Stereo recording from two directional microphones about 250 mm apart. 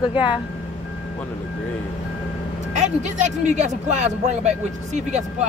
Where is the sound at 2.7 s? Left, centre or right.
Right.